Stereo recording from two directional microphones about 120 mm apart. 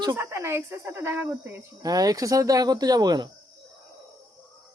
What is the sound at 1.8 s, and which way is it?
Speech, 30° right (ahead or behind).